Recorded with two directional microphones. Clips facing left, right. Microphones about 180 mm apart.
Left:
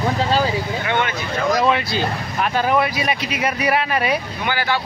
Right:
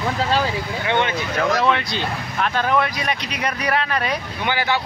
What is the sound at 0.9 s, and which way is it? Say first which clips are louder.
Speech: right 2 dB; 25° right (ahead or behind).